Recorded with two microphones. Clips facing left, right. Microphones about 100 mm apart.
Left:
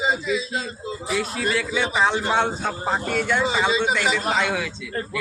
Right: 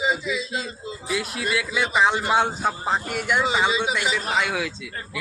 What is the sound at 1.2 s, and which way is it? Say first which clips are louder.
A man's voice: left 2 dB; 10° right (ahead or behind).